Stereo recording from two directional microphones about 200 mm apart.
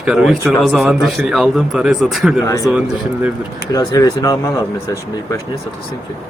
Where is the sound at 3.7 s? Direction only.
20° left (ahead or behind).